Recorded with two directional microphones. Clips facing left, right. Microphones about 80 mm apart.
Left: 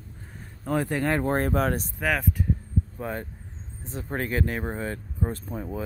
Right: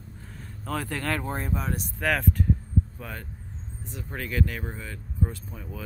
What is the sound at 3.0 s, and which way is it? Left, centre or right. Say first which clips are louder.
Speech: left 7 dB; left.